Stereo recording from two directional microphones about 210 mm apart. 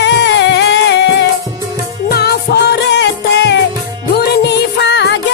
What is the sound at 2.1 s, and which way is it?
Music, 50° left (ahead or behind).